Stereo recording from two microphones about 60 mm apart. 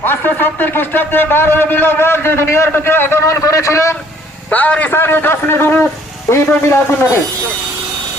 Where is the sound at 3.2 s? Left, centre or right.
Left.